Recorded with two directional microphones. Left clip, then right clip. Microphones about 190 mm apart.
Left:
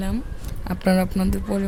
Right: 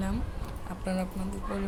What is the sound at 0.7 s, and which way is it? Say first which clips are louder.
Speech: left 13 dB; 55° left (ahead or behind).